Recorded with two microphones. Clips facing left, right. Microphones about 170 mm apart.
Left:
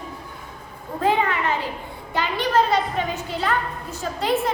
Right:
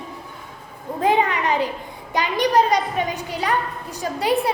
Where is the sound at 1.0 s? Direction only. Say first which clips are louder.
Right 2 dB; 15° right (ahead or behind).